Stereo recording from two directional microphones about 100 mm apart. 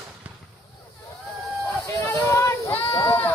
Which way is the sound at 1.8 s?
30° left (ahead or behind).